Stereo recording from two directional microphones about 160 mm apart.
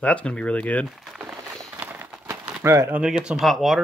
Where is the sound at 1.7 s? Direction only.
10° right (ahead or behind).